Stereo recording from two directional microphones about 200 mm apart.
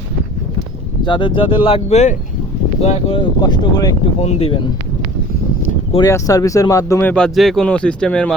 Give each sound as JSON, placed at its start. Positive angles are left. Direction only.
{"t": 1.0, "sound": "speech", "side_deg": 25}
{"t": 5.9, "sound": "speech", "side_deg": 15}